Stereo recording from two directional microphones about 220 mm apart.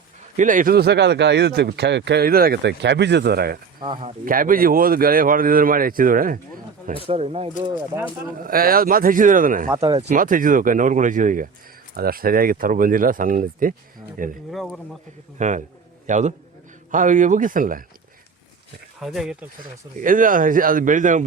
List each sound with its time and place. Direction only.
0.3 s speech: 35° right (ahead or behind)
3.8 s speech: 20° right (ahead or behind)
4.3 s speech: 40° right (ahead or behind)
7.1 s speech: 30° right (ahead or behind)
8.4 s speech: 40° right (ahead or behind)
9.6 s speech: 20° right (ahead or behind)
10.0 s speech: 35° right (ahead or behind)
14.5 s speech: centre (ahead or behind)
15.4 s speech: 35° right (ahead or behind)
18.9 s speech: centre (ahead or behind)
20.0 s speech: 35° right (ahead or behind)